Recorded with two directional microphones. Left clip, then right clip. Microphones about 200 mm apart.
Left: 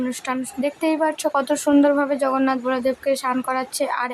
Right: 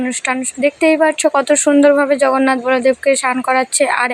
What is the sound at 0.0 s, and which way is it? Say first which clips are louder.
Speech: right 7 dB; 20° right (ahead or behind).